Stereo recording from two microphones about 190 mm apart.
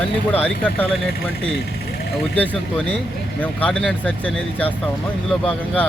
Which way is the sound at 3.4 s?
5° left (ahead or behind).